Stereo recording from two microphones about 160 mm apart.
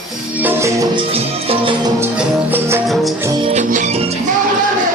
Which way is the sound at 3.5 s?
50° right (ahead or behind).